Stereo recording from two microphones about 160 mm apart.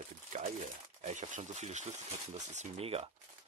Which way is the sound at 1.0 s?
50° right (ahead or behind).